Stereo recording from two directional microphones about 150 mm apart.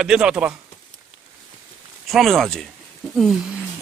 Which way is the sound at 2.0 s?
Centre (ahead or behind).